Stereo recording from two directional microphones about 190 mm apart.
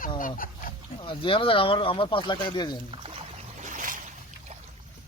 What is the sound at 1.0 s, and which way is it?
Speech, 25° left (ahead or behind).